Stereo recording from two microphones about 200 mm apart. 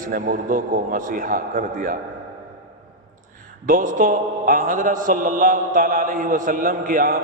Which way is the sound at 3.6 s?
45° right (ahead or behind).